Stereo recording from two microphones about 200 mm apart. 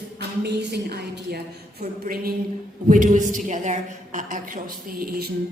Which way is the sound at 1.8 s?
45° right (ahead or behind).